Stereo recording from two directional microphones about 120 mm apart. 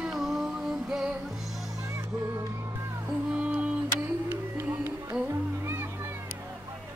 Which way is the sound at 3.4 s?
10° right (ahead or behind).